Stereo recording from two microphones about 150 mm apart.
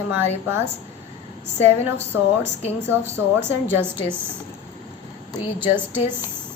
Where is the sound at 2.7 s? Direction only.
15° right (ahead or behind).